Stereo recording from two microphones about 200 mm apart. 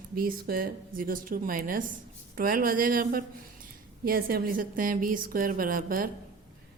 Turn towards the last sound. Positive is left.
turn(degrees=-45)  # may be behind; listen again after turning